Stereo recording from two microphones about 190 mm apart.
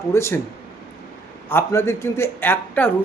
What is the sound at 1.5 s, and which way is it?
A man's voice, 15° left (ahead or behind).